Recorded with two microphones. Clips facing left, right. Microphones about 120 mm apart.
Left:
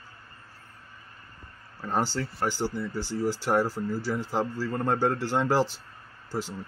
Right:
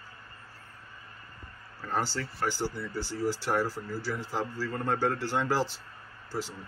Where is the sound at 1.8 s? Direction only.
20° left (ahead or behind).